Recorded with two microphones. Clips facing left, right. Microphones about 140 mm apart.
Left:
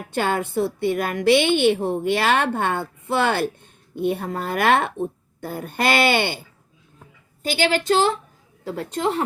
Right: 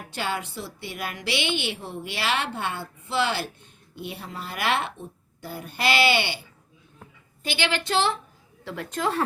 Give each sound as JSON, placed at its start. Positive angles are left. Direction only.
{"t": 0.1, "sound": "a woman's voice", "side_deg": 50}
{"t": 7.4, "sound": "a woman's voice", "side_deg": 45}